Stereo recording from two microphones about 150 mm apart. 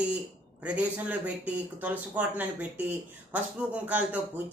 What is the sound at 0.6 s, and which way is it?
A man's voice, 10° right (ahead or behind).